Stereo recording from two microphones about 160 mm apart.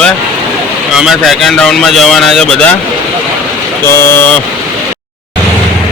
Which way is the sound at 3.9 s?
15° left (ahead or behind).